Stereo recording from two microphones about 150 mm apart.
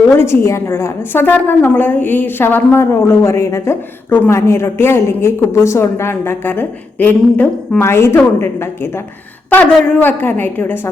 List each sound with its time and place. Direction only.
0.1 s a woman's voice: 20° left (ahead or behind)